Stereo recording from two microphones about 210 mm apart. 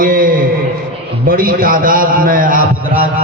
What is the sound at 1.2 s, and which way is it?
A man's voice, 45° right (ahead or behind).